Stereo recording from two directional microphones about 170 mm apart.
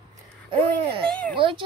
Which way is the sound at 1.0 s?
5° left (ahead or behind).